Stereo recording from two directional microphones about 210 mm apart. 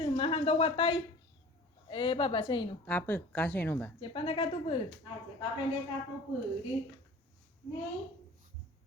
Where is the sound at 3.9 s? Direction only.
25° left (ahead or behind).